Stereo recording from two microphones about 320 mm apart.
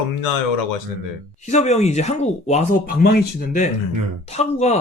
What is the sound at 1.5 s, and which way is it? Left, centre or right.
Speech, left.